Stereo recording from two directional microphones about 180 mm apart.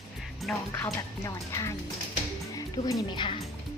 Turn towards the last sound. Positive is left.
turn(degrees=25)  # may be behind; listen again after turning